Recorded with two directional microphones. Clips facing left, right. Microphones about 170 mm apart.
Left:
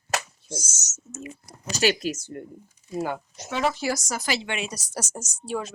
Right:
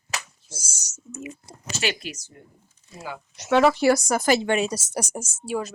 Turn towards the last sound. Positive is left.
turn(degrees=-5)  # may be behind; listen again after turning